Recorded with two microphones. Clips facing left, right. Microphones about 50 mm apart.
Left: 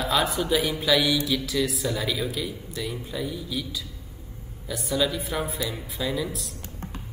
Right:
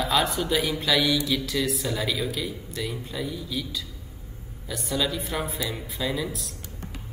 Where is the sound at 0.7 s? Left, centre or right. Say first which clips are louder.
Left 2 dB; centre.